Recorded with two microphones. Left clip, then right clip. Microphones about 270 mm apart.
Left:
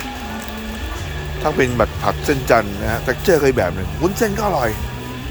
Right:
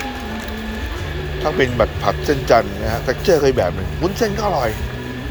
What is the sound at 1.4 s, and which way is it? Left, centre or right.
Speech, left.